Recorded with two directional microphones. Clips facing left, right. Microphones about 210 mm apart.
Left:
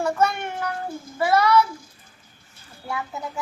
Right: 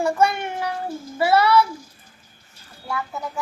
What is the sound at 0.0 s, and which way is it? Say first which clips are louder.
Child singing: right 2 dB; 10° right (ahead or behind).